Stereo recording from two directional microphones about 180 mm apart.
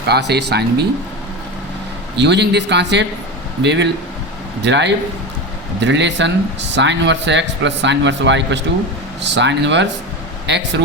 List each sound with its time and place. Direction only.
0.1 s a man's voice: 70° right (ahead or behind)
2.1 s a man's voice: 70° right (ahead or behind)